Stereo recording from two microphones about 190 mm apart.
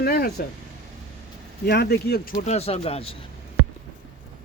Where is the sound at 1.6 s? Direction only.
60° left (ahead or behind); by 3.2 s 30° left (ahead or behind).